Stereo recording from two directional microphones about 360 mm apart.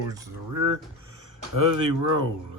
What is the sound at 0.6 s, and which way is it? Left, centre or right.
Speech, right.